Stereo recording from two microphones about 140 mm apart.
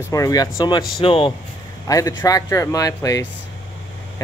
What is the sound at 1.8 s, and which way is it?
Speech, 25° left (ahead or behind).